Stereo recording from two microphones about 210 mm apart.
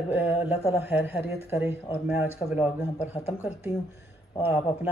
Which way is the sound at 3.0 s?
30° left (ahead or behind).